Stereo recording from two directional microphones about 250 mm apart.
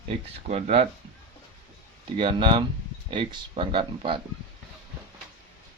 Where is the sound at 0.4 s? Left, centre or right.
Right.